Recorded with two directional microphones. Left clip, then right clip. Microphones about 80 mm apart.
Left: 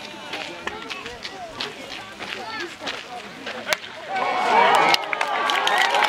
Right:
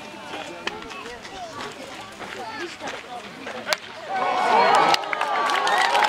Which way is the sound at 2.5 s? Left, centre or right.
Left.